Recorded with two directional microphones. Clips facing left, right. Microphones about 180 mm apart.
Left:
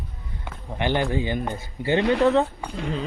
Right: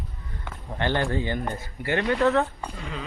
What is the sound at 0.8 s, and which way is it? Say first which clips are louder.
Speech: left 2 dB; 15° left (ahead or behind).